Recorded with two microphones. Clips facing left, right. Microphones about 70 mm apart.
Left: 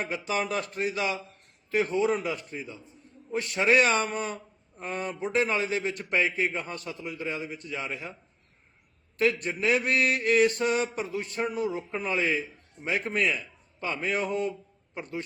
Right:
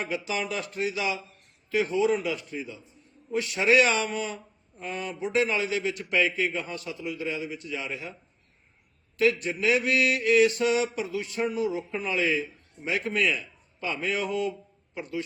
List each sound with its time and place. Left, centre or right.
0.1 s a man's voice: left
9.1 s a man's voice: left